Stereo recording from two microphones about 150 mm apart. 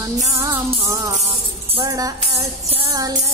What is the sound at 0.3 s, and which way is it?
Music, 20° right (ahead or behind).